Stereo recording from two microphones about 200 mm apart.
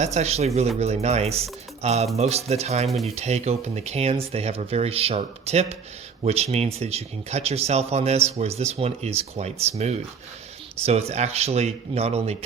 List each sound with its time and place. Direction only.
0.0 s speech: 35° right (ahead or behind)